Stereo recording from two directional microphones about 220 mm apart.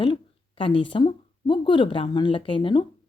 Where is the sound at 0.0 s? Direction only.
25° left (ahead or behind).